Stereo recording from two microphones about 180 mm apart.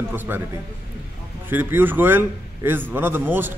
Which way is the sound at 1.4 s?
10° right (ahead or behind).